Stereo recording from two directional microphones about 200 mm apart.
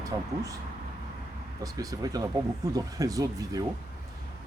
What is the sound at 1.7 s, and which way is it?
Speech, 15° right (ahead or behind).